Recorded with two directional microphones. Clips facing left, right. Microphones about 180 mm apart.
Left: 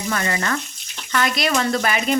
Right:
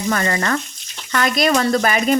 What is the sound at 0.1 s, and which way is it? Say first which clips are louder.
Speech: right 4 dB; 45° right (ahead or behind).